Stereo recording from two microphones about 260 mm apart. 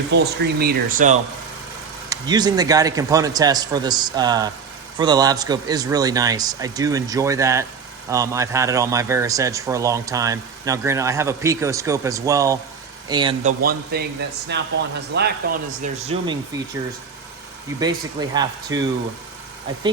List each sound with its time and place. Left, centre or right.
0.1 s speech: right
2.0 s a man's voice: centre
13.4 s speech: right
16.2 s a man's voice: centre
17.7 s a man's voice: centre